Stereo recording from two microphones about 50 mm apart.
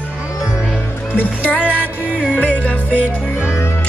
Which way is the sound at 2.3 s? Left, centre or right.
Left.